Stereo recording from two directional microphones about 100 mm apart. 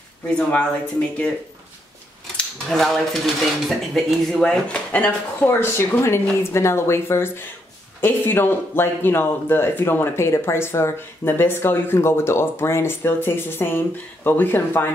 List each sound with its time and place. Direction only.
0.3 s speech: 10° left (ahead or behind)
2.3 s cutlery: 5° left (ahead or behind)
3.6 s speech: centre (ahead or behind); by 14.9 s 20° left (ahead or behind)